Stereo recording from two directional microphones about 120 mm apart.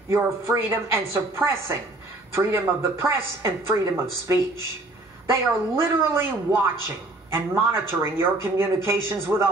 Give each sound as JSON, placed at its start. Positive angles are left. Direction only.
{"t": 0.1, "sound": "speech", "side_deg": -20}